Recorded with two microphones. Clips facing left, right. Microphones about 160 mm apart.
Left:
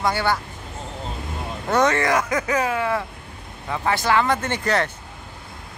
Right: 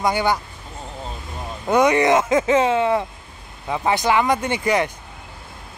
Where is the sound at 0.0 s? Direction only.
15° right (ahead or behind).